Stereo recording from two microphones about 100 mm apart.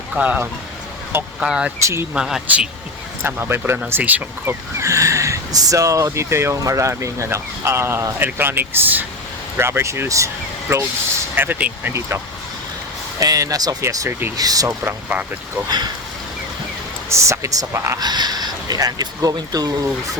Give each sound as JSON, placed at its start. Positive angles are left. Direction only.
{"t": 0.2, "sound": "speech", "side_deg": -15}
{"t": 1.8, "sound": "speech", "side_deg": -25}
{"t": 2.1, "sound": "speech", "side_deg": -10}
{"t": 3.2, "sound": "speech", "side_deg": -20}
{"t": 4.8, "sound": "speech", "side_deg": -30}
{"t": 14.7, "sound": "speech", "side_deg": -15}
{"t": 17.1, "sound": "speech", "side_deg": -30}
{"t": 18.0, "sound": "speech", "side_deg": -45}